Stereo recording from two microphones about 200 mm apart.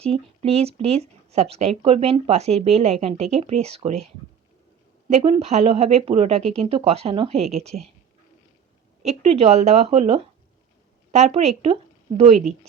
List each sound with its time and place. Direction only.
0.0 s speech: 30° right (ahead or behind)
5.0 s speech: 35° right (ahead or behind)
9.0 s speech: 30° right (ahead or behind)